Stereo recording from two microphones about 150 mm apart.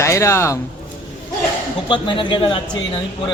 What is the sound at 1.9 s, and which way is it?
Speech, 35° left (ahead or behind).